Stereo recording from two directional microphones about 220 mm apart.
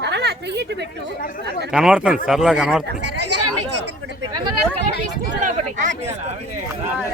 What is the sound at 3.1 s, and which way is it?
Chatter, 90° right.